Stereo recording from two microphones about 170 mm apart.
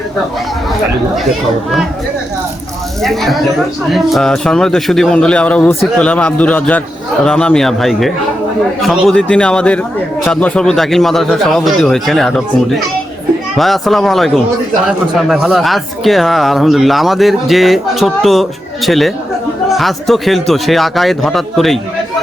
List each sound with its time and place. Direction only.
3.0 s speech: centre (ahead or behind)